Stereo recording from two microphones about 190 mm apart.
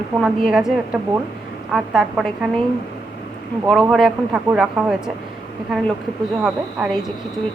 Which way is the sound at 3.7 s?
Centre (ahead or behind).